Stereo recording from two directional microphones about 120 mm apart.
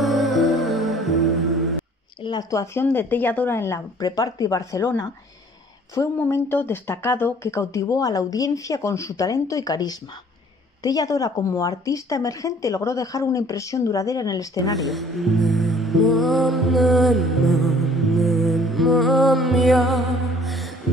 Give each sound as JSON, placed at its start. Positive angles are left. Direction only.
{"t": 0.0, "sound": "music", "side_deg": 0}
{"t": 2.2, "sound": "speech", "side_deg": 35}
{"t": 2.6, "sound": "speech", "side_deg": 20}
{"t": 14.8, "sound": "speech", "side_deg": 0}